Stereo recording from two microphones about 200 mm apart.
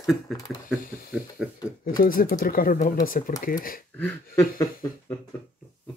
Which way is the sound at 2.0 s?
45° left (ahead or behind).